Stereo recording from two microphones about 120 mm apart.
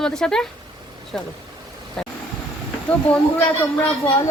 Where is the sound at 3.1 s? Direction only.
15° left (ahead or behind).